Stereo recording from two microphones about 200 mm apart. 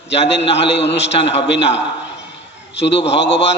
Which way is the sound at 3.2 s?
60° left (ahead or behind).